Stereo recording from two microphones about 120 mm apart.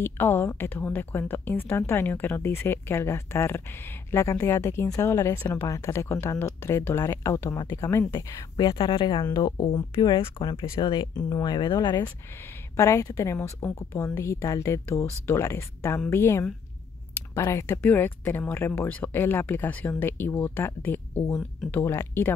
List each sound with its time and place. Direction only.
0.0 s a woman's voice: 20° left (ahead or behind)
8.7 s speech: 45° left (ahead or behind)
9.2 s speech: 30° left (ahead or behind)
12.7 s a woman's voice: 25° left (ahead or behind)